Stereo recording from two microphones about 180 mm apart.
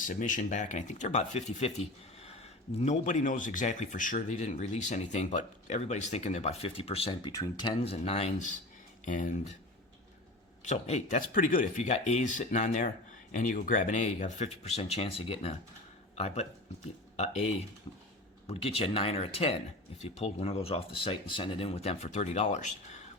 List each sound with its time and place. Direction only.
0.0 s speech: 45° left (ahead or behind)
10.6 s speech: 40° left (ahead or behind)